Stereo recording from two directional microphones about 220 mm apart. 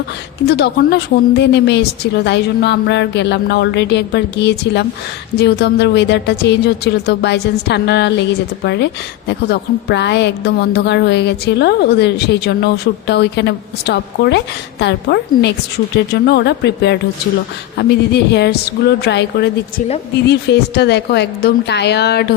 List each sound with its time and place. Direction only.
0.4 s a woman's voice: 50° left (ahead or behind)